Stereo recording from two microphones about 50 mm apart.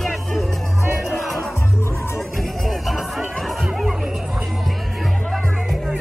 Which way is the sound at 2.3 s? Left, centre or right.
Centre.